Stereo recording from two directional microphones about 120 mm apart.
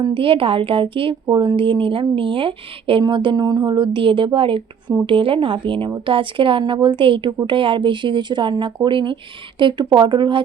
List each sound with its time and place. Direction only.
0.0 s a woman's voice: 45° right (ahead or behind)